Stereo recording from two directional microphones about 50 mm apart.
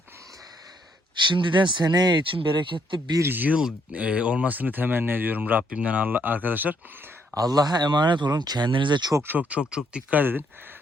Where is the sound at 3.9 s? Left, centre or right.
Right.